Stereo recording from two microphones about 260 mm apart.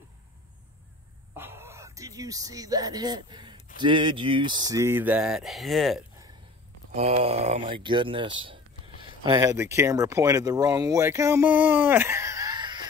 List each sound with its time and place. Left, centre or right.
1.3 s a sound: centre
3.7 s speech: centre
7.0 s speech: right